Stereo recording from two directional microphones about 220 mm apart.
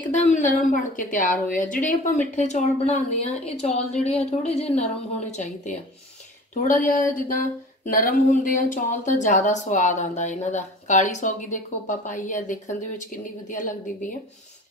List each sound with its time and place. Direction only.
0.1 s speech: 35° left (ahead or behind)